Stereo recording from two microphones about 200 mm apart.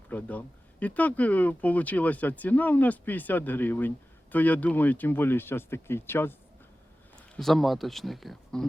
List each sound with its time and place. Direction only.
0.1 s speech: 10° left (ahead or behind)
7.3 s speech: centre (ahead or behind)